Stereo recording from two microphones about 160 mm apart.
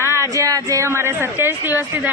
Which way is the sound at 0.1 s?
20° right (ahead or behind).